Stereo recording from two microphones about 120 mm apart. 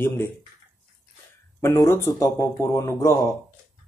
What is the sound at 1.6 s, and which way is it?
Speech, 25° left (ahead or behind).